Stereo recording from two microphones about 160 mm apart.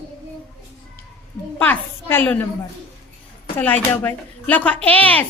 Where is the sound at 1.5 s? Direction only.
10° left (ahead or behind).